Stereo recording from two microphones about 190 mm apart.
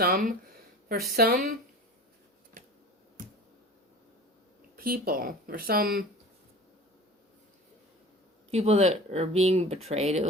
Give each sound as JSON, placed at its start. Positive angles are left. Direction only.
{"t": 0.0, "sound": "speech", "side_deg": -50}
{"t": 4.8, "sound": "speech", "side_deg": -50}
{"t": 8.4, "sound": "speech", "side_deg": -35}